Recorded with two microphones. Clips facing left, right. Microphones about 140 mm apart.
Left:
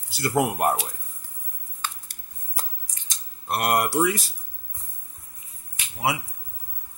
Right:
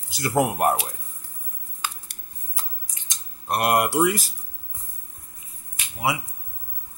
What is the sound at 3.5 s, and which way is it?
Mantra, 10° right (ahead or behind).